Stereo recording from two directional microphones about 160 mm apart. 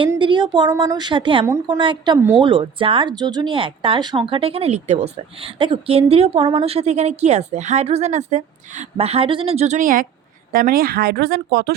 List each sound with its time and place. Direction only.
0.2 s a woman's voice: 30° right (ahead or behind)
1.5 s a woman's voice: 15° right (ahead or behind)
1.8 s a woman's voice: 30° right (ahead or behind); by 11.7 s 75° right (ahead or behind)